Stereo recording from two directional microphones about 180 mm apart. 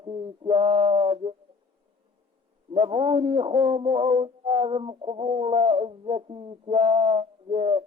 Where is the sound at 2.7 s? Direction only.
30° right (ahead or behind).